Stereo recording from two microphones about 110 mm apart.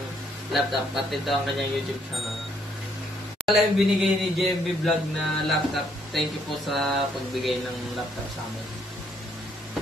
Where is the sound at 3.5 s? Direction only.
Centre (ahead or behind).